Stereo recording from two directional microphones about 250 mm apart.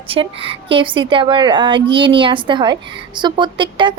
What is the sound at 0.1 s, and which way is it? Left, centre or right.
Speech, right.